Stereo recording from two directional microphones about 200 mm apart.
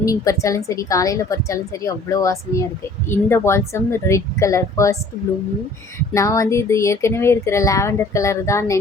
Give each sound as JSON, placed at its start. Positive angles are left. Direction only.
{"t": 0.0, "sound": "a woman's voice", "side_deg": 15}
{"t": 6.1, "sound": "a woman's voice", "side_deg": 15}